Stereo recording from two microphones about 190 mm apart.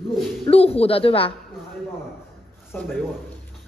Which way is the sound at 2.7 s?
5° left (ahead or behind).